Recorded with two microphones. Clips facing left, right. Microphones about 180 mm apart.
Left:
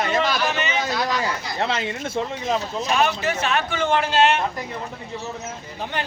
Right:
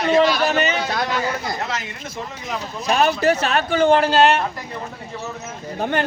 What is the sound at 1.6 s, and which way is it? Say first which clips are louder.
Speech: left 4 dB; 30° left (ahead or behind).